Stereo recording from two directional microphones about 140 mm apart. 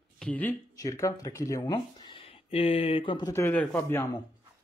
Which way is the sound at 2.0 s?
40° left (ahead or behind).